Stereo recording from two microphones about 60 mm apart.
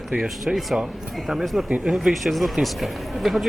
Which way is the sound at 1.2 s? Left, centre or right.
Centre.